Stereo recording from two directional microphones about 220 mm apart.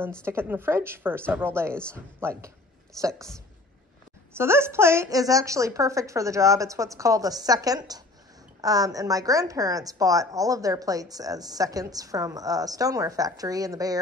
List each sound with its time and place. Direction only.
0.2 s a woman's voice: 10° right (ahead or behind)
4.4 s a woman's voice: 10° right (ahead or behind)